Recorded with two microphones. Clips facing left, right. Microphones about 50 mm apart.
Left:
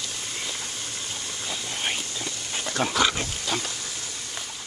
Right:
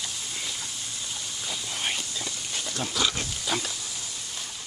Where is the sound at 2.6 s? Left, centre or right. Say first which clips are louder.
Left 6 dB; left.